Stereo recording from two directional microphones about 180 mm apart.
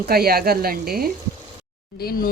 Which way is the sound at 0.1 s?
60° right (ahead or behind).